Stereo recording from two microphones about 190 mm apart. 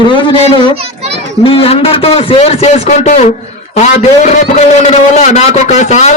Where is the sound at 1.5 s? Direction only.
30° left (ahead or behind).